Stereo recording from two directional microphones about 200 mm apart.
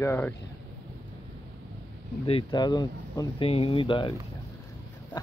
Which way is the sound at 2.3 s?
25° left (ahead or behind).